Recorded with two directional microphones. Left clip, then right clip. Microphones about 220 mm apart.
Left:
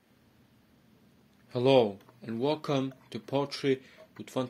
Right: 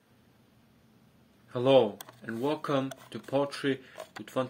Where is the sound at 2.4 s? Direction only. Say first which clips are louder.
Even; 30° left (ahead or behind).